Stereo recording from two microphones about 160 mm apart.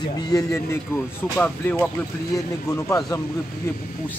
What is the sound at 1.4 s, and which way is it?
Speech, 10° left (ahead or behind).